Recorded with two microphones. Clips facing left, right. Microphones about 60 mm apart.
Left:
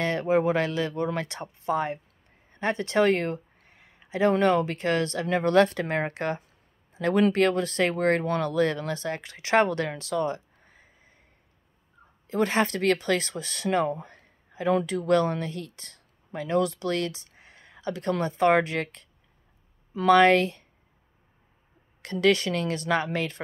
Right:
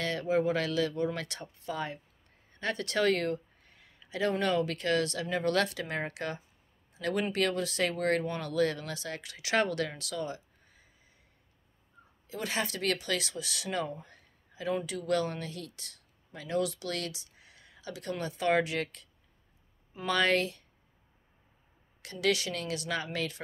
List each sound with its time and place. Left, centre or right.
0.0 s speech: left
6.9 s a sound: left
7.3 s speech: left
12.3 s speech: left
14.0 s a sound: left
14.9 s speech: left
20.1 s speech: left
22.0 s a woman's voice: left